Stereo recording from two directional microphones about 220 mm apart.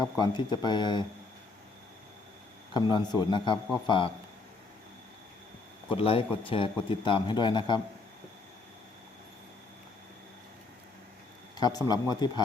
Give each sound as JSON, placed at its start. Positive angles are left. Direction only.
{"t": 0.0, "sound": "a man's voice", "side_deg": 20}
{"t": 2.7, "sound": "a man's voice", "side_deg": 20}
{"t": 5.9, "sound": "a man's voice", "side_deg": 25}
{"t": 11.6, "sound": "speech", "side_deg": 15}